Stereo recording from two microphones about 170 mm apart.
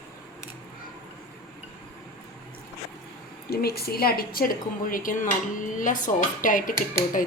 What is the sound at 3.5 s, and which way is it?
A woman's voice, 65° left (ahead or behind).